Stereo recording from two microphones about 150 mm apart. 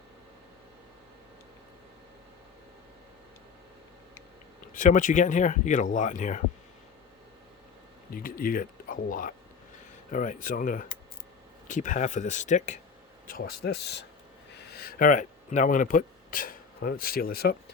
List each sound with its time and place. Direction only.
4.7 s speech: 60° left (ahead or behind)
8.1 s speech: 70° left (ahead or behind); by 12.8 s 55° left (ahead or behind)
13.2 s speech: 80° left
14.8 s speech: 75° left (ahead or behind)